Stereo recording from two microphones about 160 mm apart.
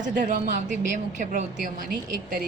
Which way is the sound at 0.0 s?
55° right (ahead or behind).